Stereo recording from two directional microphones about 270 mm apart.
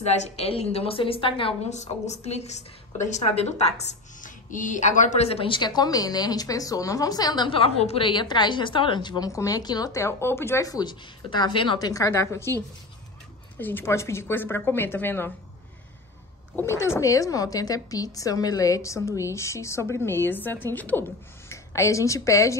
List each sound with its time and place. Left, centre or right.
0.0 s a woman's voice: left
13.6 s a woman's voice: centre
16.5 s a woman's voice: centre